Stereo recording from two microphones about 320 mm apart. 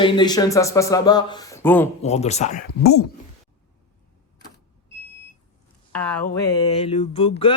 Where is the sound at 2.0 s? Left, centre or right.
Centre.